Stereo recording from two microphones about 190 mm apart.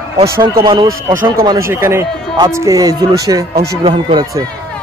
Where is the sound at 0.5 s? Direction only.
20° right (ahead or behind).